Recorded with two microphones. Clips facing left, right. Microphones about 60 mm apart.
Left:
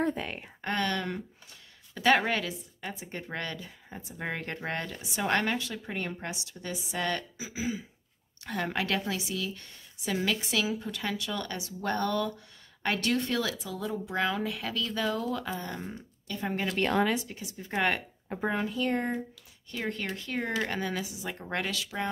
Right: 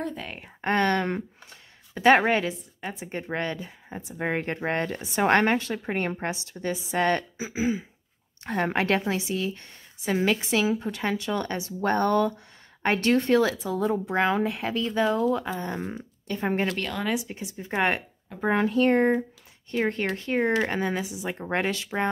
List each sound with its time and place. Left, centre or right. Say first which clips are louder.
0.2 s speech: left 1 dB; centre
0.6 s a woman's voice: right 7 dB; right
16.3 s a woman's voice: right 6 dB; right
17.6 s a woman's voice: right 3 dB; right
18.5 s a woman's voice: right 9 dB; right